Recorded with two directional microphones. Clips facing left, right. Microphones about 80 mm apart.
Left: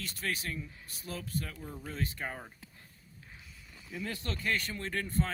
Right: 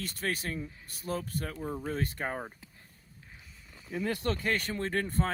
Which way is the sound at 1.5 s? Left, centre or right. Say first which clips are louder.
Right 8 dB; right.